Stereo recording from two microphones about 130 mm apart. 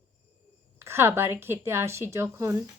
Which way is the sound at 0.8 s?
20° right (ahead or behind).